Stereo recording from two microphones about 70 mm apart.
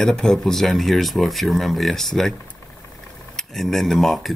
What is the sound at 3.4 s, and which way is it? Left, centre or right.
Speech, centre.